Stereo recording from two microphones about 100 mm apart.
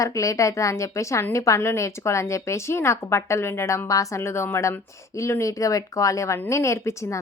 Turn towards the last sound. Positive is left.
turn(degrees=30)  # may be behind; listen again after turning